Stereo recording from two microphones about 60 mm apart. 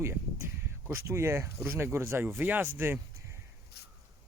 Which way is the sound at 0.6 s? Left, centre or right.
Right.